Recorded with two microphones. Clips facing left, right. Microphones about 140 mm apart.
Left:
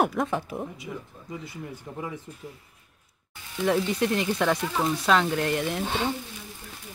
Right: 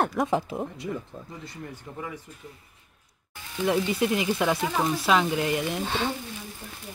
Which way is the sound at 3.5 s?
5° right (ahead or behind).